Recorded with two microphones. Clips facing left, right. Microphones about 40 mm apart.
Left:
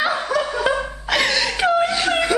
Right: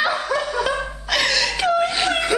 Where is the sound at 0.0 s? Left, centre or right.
Centre.